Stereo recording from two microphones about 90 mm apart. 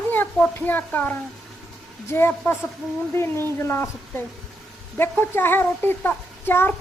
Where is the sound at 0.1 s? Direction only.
15° left (ahead or behind).